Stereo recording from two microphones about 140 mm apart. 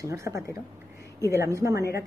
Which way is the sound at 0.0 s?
20° right (ahead or behind).